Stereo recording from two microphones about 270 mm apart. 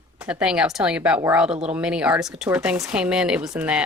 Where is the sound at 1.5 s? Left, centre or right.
Right.